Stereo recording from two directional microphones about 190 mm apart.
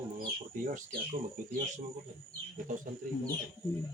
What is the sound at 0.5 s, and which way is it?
Speech, 45° right (ahead or behind).